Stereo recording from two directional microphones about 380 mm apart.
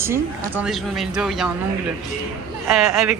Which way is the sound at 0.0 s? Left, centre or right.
Centre.